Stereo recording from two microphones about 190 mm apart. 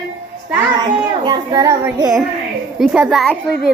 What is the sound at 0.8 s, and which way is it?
Child singing, 20° right (ahead or behind).